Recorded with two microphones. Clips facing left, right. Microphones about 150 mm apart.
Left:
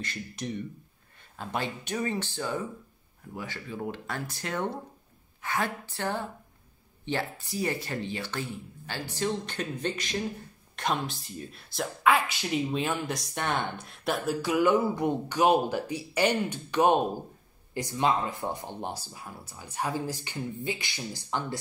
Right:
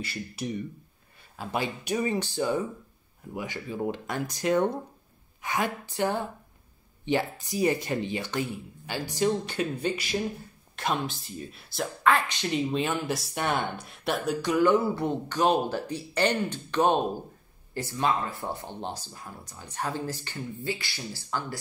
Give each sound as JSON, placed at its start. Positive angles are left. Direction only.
{"t": 0.0, "sound": "speech", "side_deg": -10}